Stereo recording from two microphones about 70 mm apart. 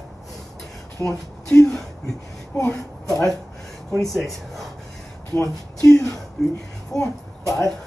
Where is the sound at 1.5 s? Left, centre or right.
Centre.